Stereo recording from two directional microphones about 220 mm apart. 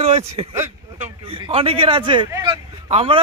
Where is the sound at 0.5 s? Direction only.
10° right (ahead or behind).